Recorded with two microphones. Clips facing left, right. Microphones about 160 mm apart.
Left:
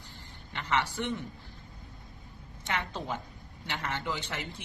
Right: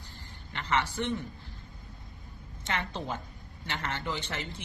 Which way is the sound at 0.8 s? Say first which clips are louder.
Right 1 dB; 15° left (ahead or behind).